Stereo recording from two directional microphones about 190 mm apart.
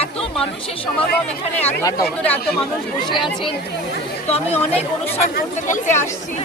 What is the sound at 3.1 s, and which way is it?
Speech, 25° left (ahead or behind).